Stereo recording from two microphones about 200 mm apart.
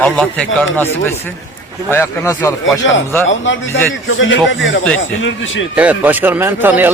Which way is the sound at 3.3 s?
70° left (ahead or behind).